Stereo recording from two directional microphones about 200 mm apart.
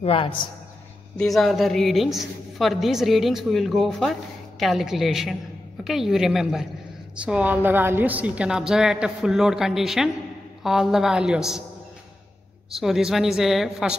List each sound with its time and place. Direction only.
0.0 s a man's voice: 25° left (ahead or behind)
1.1 s a woman's voice: centre (ahead or behind)
12.7 s a woman's voice: centre (ahead or behind)